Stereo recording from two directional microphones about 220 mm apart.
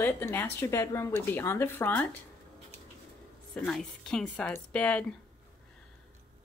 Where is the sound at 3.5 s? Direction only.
5° left (ahead or behind).